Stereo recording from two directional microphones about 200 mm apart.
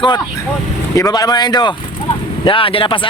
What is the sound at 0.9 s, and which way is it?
Speech, 20° left (ahead or behind).